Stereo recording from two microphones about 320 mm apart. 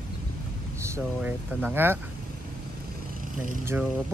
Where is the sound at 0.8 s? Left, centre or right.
Centre.